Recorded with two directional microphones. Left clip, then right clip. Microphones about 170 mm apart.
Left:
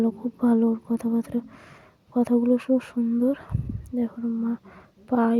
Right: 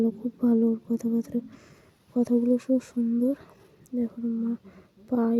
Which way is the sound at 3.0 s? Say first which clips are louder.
Left 2 dB; centre (ahead or behind).